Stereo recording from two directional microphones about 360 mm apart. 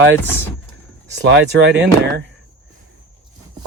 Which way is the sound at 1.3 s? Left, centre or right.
Right.